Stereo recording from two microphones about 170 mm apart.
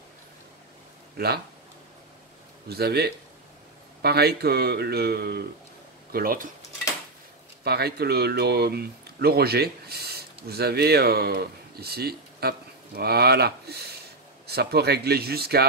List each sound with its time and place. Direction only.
1.1 s speech: 70° right (ahead or behind)
2.7 s speech: 70° right (ahead or behind)
6.1 s speech: 60° right (ahead or behind)
7.6 s speech: 70° right (ahead or behind)